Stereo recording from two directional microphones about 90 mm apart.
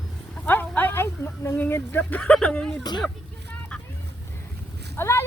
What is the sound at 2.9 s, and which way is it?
Speech, 50° left (ahead or behind).